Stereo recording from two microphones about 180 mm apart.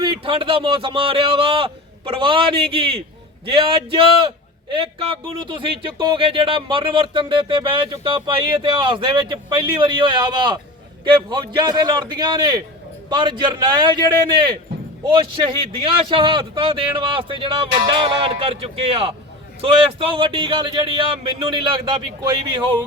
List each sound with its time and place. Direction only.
0.0 s speech: 30° right (ahead or behind)
15.0 s speech: 30° right (ahead or behind)